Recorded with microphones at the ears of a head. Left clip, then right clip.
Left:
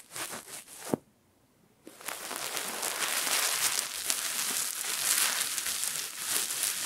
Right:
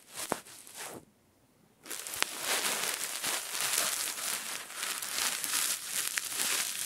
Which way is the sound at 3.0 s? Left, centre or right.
Left.